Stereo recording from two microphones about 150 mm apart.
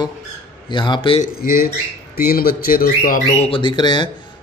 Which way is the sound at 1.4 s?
90° left.